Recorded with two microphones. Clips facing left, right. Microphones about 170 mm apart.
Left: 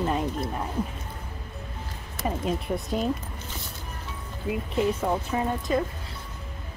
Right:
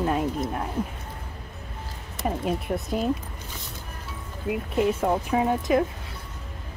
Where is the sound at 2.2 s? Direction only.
5° right (ahead or behind).